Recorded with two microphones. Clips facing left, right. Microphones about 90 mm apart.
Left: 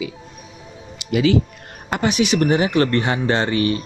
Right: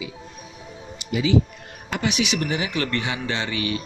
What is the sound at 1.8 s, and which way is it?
Speech, 45° left (ahead or behind).